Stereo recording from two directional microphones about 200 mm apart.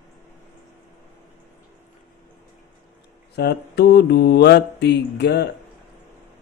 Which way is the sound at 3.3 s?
55° left (ahead or behind).